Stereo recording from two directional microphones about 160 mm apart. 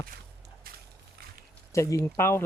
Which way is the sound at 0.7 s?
65° right (ahead or behind).